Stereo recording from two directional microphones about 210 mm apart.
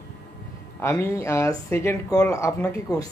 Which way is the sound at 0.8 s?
10° left (ahead or behind).